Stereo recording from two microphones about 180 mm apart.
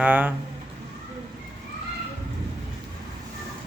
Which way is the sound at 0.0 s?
10° right (ahead or behind).